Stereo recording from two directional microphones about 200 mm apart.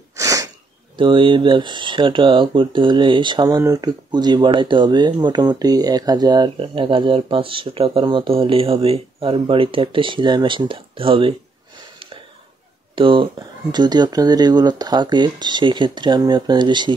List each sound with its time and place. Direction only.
0.1 s sneeze: 15° right (ahead or behind)
0.9 s speech: 25° right (ahead or behind)
12.9 s speech: 25° right (ahead or behind)